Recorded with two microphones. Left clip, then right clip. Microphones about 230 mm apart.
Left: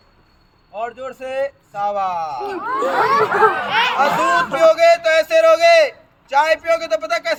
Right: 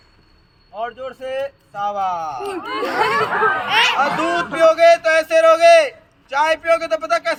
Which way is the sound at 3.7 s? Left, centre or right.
Right.